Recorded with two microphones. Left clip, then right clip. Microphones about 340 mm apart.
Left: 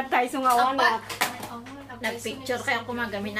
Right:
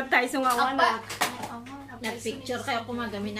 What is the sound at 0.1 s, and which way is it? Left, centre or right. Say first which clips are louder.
Speech: right 1 dB; centre.